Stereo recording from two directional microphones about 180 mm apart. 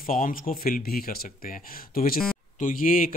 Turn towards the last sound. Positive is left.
turn(degrees=50)  # may be behind; listen again after turning